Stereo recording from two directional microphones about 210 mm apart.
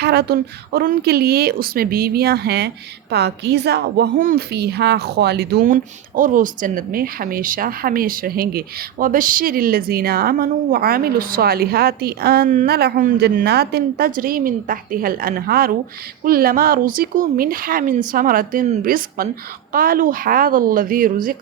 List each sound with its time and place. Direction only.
0.0 s a woman's voice: 50° right (ahead or behind)